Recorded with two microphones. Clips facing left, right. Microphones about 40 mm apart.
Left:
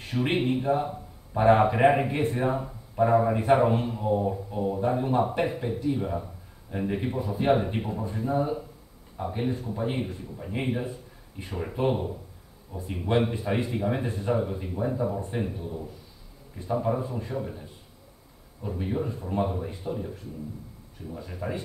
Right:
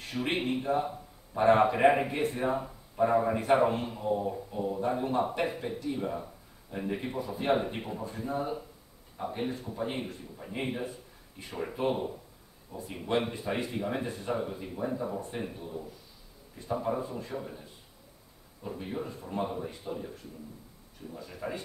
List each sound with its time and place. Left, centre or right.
0.0 s a man's voice: centre
14.0 s speech: centre
14.3 s speech: centre
15.1 s speech: centre
15.4 s speech: centre
18.8 s speech: centre
21.1 s speech: centre